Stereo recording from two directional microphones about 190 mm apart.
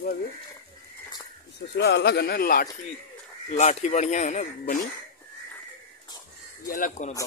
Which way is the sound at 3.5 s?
35° left (ahead or behind).